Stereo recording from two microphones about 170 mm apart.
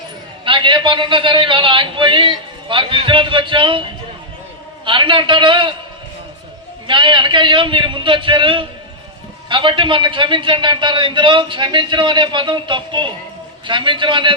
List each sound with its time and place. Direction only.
0.4 s a man's voice: 30° right (ahead or behind)
4.9 s a man's voice: 30° right (ahead or behind)
6.8 s a man's voice: 30° right (ahead or behind)